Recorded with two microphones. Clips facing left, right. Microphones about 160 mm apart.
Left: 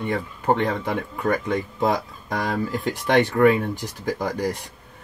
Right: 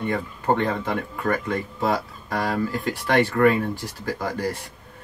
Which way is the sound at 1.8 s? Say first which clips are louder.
Left 1 dB; 20° left (ahead or behind).